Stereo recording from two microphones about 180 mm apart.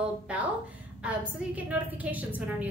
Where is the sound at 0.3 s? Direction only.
5° right (ahead or behind).